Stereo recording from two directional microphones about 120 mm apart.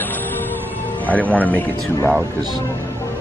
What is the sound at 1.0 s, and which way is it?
Speech, 15° left (ahead or behind).